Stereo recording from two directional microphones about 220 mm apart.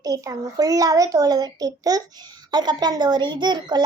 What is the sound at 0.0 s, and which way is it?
A child's voice, 15° right (ahead or behind).